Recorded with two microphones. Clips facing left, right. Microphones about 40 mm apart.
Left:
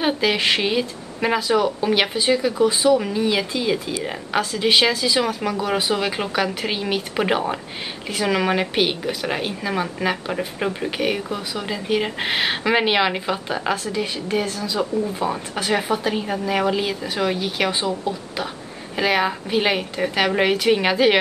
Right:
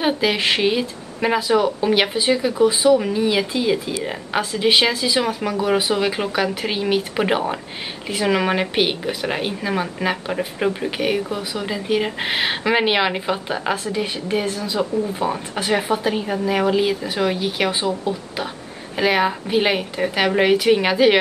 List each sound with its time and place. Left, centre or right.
0.0 s speech: centre
14.8 s speech: centre